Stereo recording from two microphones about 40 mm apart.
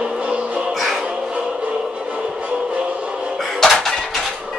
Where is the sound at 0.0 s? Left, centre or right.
Right.